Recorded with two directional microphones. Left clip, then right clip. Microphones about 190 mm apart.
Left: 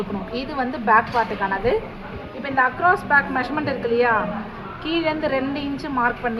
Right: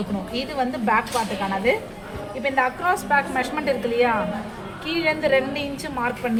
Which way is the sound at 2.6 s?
30° left (ahead or behind).